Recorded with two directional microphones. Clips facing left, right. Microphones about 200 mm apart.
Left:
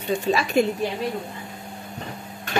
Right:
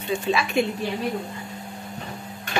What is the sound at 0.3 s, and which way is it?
Speech, 40° left (ahead or behind).